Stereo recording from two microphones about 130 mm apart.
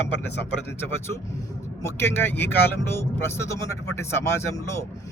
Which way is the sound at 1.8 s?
15° left (ahead or behind).